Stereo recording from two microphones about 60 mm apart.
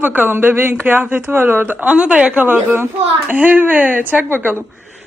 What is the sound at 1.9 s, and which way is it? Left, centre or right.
A woman's voice, centre.